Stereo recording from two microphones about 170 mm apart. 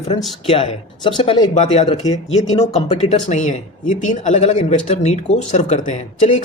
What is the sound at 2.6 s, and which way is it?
Speech, 40° left (ahead or behind).